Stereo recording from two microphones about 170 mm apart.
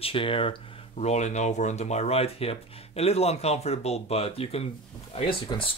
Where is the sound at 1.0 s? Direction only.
40° left (ahead or behind).